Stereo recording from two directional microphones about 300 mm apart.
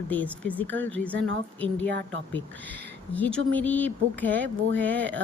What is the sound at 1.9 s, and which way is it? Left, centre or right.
Speech, right.